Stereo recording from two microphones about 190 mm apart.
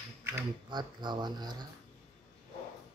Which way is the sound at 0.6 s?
25° right (ahead or behind).